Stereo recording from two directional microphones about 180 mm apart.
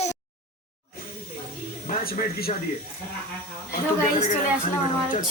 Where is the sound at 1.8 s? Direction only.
55° left (ahead or behind).